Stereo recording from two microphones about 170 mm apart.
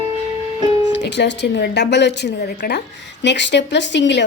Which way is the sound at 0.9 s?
90° left.